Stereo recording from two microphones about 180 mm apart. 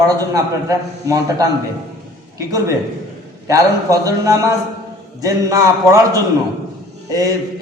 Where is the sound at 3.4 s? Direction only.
20° right (ahead or behind).